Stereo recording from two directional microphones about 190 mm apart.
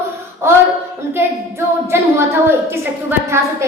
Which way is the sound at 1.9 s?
15° right (ahead or behind).